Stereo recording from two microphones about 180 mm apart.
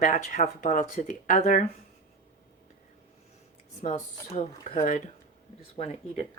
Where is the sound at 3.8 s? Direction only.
45° left (ahead or behind).